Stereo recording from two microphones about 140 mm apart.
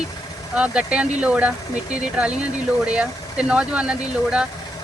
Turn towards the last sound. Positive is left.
turn(degrees=-5)  # may be behind; listen again after turning